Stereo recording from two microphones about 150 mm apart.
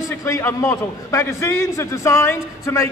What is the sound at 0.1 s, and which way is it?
A man's voice, 15° left (ahead or behind).